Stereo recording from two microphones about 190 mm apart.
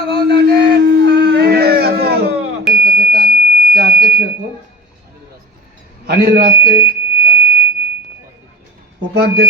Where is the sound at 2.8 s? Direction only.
55° right (ahead or behind).